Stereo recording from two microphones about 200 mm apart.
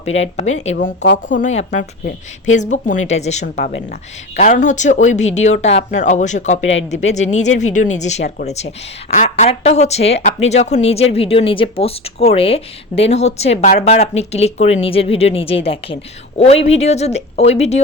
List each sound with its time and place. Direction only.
0.0 s speech: 35° left (ahead or behind)
1.0 s speech: 65° left (ahead or behind)
1.4 s speech: 35° left (ahead or behind)
6.6 s speech: 70° left (ahead or behind)
6.9 s speech: 35° left (ahead or behind)